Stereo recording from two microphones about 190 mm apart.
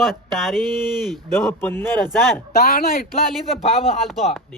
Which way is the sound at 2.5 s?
50° left (ahead or behind).